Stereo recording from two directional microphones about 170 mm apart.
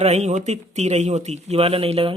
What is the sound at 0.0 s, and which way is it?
Speech, 40° right (ahead or behind).